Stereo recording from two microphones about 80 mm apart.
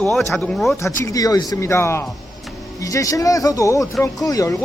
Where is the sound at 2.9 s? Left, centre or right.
Left.